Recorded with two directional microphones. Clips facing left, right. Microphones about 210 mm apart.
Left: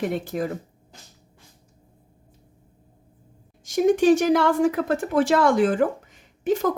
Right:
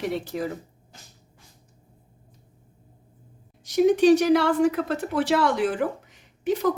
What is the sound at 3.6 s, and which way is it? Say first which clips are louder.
Speech: even; 50° left (ahead or behind).